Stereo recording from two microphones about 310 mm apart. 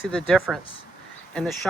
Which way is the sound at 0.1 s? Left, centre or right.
Centre.